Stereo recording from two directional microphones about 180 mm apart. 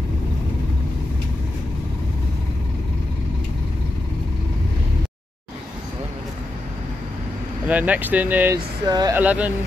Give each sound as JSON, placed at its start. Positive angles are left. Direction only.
{"t": 7.6, "sound": "speech", "side_deg": -10}
{"t": 8.8, "sound": "speech", "side_deg": -20}
{"t": 9.1, "sound": "speech", "side_deg": -10}